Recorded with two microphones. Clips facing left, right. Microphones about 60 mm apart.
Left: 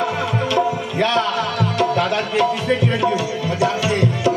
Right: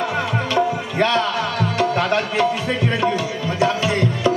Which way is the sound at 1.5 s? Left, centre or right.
Right.